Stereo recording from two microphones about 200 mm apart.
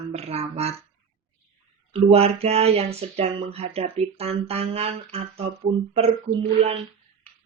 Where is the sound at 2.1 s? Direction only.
30° right (ahead or behind).